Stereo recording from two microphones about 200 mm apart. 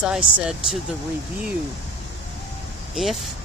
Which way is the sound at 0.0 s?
5° right (ahead or behind).